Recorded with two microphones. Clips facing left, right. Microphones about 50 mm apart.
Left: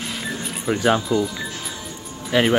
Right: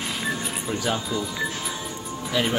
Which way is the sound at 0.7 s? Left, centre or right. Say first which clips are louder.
Left 8 dB; left.